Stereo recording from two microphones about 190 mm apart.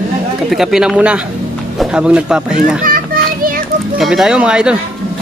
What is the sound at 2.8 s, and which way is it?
Children playing, 50° right (ahead or behind).